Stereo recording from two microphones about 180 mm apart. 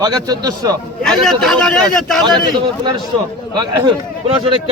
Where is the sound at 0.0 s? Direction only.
20° right (ahead or behind).